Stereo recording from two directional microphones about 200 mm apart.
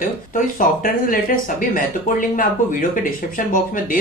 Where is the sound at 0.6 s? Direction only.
45° left (ahead or behind).